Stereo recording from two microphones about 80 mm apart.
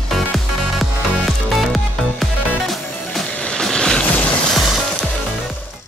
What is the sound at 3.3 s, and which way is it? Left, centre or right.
Music, centre.